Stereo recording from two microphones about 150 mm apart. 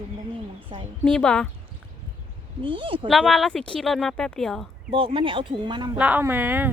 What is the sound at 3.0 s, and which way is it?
Speech, centre (ahead or behind).